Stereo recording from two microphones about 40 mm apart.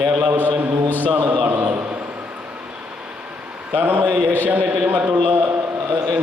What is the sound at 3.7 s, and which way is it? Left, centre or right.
Speech, right.